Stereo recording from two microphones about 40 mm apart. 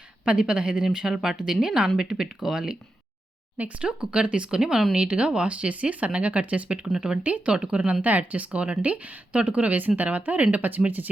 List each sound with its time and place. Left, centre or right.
0.3 s speech: right
0.9 s speech: centre
3.8 s speech: right
4.9 s speech: right
7.5 s speech: right
8.0 s speech: right